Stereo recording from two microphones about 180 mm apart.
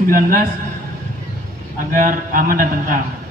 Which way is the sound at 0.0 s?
50° right (ahead or behind).